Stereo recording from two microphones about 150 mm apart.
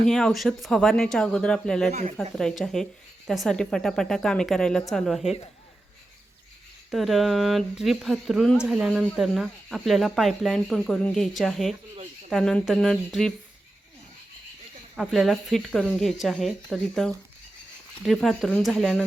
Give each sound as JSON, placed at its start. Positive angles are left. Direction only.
{"t": 0.1, "sound": "speech", "side_deg": 5}
{"t": 1.9, "sound": "speech", "side_deg": -50}
{"t": 2.1, "sound": "speech", "side_deg": 5}
{"t": 6.9, "sound": "speech", "side_deg": 0}
{"t": 14.9, "sound": "speech", "side_deg": 0}